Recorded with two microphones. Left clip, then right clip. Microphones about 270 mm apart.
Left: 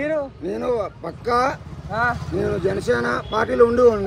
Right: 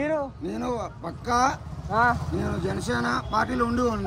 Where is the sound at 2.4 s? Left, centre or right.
Centre.